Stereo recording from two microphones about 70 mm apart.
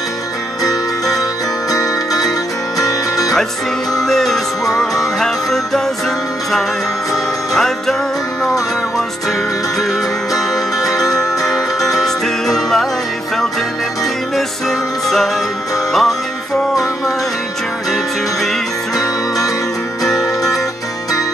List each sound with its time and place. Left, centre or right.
1.7 s music: left
3.9 s music: centre
11.4 s music: centre
14.3 s music: centre